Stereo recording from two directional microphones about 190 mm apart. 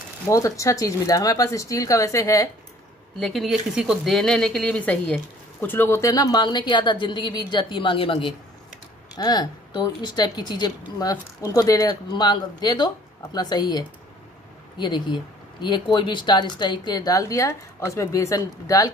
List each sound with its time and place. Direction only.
0.3 s speech: 15° left (ahead or behind)
3.2 s speech: centre (ahead or behind); by 18.9 s 15° left (ahead or behind)